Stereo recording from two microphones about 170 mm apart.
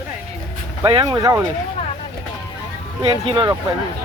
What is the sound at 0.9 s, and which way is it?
Speech, 25° right (ahead or behind).